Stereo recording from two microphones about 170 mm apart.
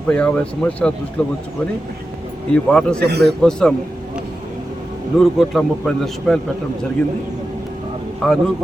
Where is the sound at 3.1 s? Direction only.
75° right (ahead or behind).